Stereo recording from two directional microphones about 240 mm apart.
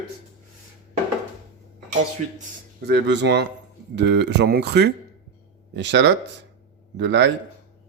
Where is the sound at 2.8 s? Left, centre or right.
Right.